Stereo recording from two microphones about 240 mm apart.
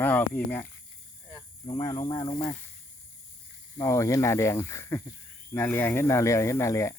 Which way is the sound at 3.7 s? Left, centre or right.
Centre.